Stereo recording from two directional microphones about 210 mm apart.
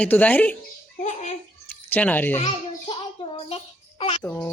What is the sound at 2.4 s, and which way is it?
Child singing, 25° left (ahead or behind).